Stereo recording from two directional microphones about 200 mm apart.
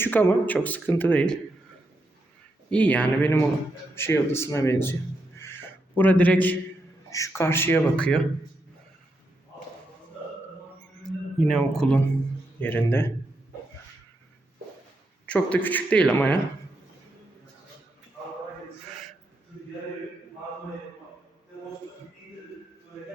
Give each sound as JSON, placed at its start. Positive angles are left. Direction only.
{"t": 0.0, "sound": "speech", "side_deg": 10}
{"t": 2.6, "sound": "speech", "side_deg": 5}
{"t": 10.8, "sound": "a sound", "side_deg": 0}
{"t": 12.5, "sound": "speech", "side_deg": 10}
{"t": 15.3, "sound": "speech", "side_deg": 5}